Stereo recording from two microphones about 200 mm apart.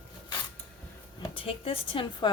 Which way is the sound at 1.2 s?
25° left (ahead or behind).